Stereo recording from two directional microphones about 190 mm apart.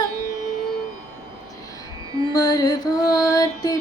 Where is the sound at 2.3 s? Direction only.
20° left (ahead or behind).